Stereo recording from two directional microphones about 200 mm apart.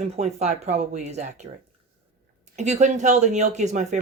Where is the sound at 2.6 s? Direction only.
35° right (ahead or behind).